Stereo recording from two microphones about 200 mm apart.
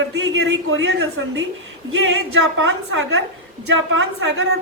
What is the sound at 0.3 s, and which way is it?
Speech, 75° right (ahead or behind).